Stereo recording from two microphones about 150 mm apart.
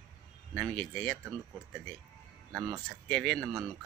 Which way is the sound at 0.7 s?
5° left (ahead or behind).